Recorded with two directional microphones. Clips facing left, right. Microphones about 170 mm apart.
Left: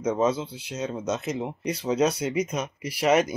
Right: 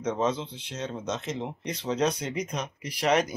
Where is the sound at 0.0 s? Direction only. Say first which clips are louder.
Left 4 dB; 10° left (ahead or behind).